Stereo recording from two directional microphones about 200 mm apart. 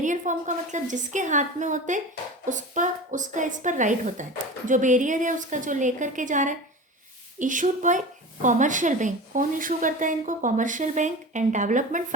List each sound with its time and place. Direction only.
0.0 s a woman's voice: 40° right (ahead or behind)